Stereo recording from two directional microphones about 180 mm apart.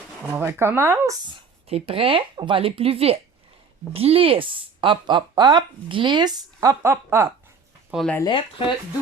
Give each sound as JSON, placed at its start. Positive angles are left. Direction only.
{"t": 0.3, "sound": "speech", "side_deg": -10}
{"t": 1.3, "sound": "speech", "side_deg": -30}
{"t": 7.9, "sound": "speech", "side_deg": 0}
{"t": 8.3, "sound": "speech", "side_deg": 30}